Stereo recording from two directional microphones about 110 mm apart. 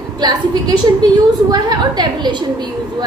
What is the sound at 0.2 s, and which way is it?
Speech, 40° right (ahead or behind).